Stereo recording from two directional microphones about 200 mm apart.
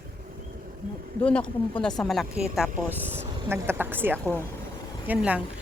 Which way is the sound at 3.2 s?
10° right (ahead or behind).